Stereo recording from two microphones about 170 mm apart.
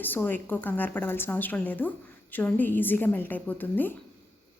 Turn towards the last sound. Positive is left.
turn(degrees=10)  # may be behind; listen again after turning